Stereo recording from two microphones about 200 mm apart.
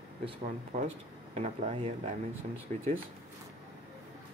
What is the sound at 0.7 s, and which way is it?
Speech, 30° right (ahead or behind).